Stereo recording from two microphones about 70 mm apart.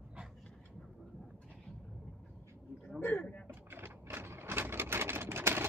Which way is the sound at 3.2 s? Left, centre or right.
Centre.